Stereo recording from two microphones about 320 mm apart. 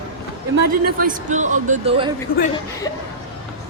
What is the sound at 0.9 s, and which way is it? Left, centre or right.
Speech, right.